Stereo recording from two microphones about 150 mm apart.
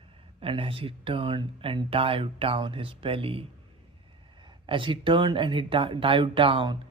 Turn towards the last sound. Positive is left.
turn(degrees=-30)  # may be behind; listen again after turning